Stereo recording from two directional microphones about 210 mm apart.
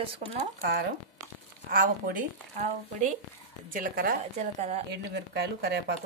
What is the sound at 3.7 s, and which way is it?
A woman's voice, 40° right (ahead or behind).